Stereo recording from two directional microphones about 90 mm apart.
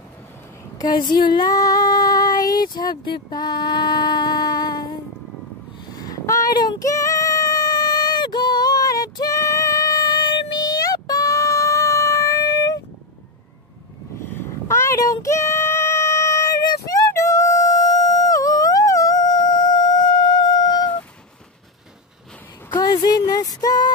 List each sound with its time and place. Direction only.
0.7 s female singing: 55° left (ahead or behind)
5.9 s female singing: 40° left (ahead or behind)
14.3 s a sound: 30° left (ahead or behind); by 20.9 s 50° left (ahead or behind)
22.8 s music: 50° left (ahead or behind)